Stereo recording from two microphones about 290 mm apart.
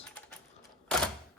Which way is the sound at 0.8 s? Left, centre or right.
Centre.